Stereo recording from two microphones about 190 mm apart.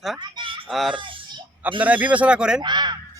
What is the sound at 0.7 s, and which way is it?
A man's voice, centre (ahead or behind).